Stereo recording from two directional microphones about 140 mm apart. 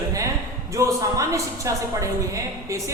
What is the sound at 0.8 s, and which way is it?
A woman's voice, 25° right (ahead or behind).